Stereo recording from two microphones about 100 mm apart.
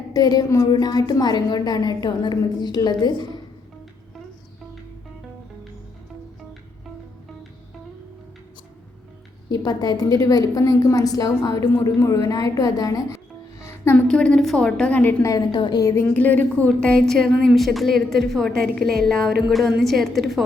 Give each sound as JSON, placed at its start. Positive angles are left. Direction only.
{"t": 0.1, "sound": "a woman's voice", "side_deg": 40}
{"t": 9.5, "sound": "a woman's voice", "side_deg": 40}
{"t": 12.3, "sound": "music", "side_deg": 35}
{"t": 13.9, "sound": "a woman's voice", "side_deg": 10}
{"t": 15.2, "sound": "a woman's voice", "side_deg": 35}
{"t": 15.5, "sound": "a woman's voice", "side_deg": 50}
{"t": 15.8, "sound": "a woman's voice", "side_deg": 30}
{"t": 16.1, "sound": "a woman's voice", "side_deg": 15}